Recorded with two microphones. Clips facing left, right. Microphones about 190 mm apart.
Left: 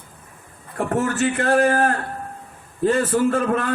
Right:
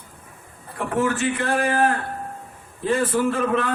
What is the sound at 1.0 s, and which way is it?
A man's voice, 45° left (ahead or behind).